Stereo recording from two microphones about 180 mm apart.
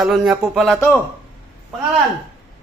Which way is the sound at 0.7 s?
10° left (ahead or behind).